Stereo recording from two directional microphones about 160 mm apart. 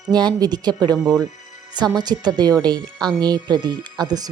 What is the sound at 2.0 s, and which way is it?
Speech, 25° right (ahead or behind).